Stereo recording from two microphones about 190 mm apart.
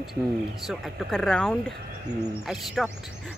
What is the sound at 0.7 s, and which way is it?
Speech, centre (ahead or behind).